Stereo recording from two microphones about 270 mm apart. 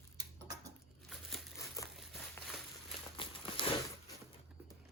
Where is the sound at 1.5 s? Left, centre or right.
Centre.